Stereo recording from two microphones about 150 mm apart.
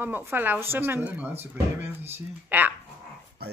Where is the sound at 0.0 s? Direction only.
15° right (ahead or behind).